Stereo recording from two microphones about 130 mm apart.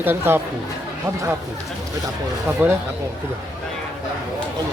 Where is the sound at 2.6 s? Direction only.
15° right (ahead or behind).